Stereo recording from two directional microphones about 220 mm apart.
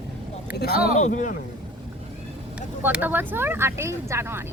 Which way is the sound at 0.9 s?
35° left (ahead or behind).